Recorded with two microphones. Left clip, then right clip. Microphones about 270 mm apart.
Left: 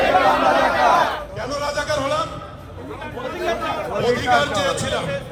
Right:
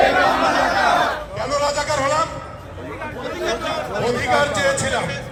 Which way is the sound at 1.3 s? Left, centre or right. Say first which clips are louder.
Right 4 dB; centre.